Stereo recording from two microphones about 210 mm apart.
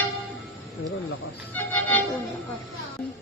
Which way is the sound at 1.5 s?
10° left (ahead or behind).